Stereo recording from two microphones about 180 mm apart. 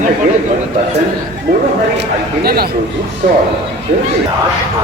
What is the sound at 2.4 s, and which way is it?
Speech, 60° right (ahead or behind).